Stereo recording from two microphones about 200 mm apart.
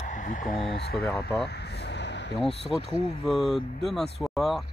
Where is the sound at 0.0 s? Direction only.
40° left (ahead or behind).